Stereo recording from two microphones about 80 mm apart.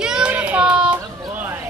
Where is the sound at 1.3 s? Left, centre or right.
Right.